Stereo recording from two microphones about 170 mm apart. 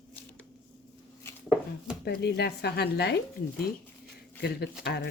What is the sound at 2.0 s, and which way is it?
Speech, 75° left (ahead or behind).